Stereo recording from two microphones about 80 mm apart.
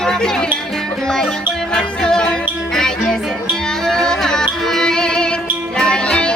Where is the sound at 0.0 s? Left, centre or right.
Centre.